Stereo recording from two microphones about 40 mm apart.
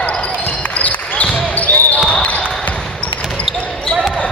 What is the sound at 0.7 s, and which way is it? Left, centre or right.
Basketball bounce, left.